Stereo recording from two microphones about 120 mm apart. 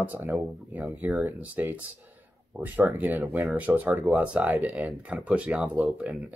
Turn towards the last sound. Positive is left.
turn(degrees=-10)  # may be behind; listen again after turning